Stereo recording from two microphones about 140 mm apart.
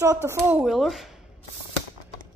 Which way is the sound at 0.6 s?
Centre (ahead or behind).